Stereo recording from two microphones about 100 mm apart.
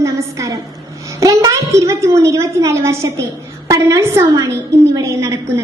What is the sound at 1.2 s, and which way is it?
A woman's voice, 30° right (ahead or behind).